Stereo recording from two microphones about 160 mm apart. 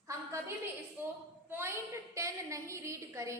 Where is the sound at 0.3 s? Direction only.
15° right (ahead or behind).